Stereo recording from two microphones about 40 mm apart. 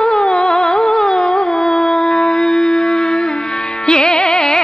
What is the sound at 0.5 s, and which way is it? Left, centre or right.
Music, centre.